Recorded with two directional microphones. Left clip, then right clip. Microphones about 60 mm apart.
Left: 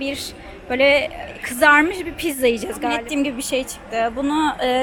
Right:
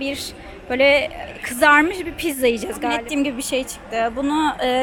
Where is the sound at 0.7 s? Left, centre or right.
Right.